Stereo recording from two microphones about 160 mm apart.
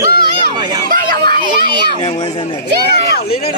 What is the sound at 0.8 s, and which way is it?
Speech, 60° right (ahead or behind).